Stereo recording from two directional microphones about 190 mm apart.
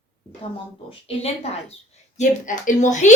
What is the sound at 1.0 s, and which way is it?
A woman's voice, 30° left (ahead or behind).